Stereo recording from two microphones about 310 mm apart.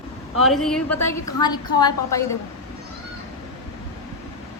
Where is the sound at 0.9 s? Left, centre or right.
Left.